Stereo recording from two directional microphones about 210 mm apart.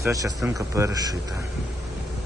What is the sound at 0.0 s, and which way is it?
Speech, 15° right (ahead or behind).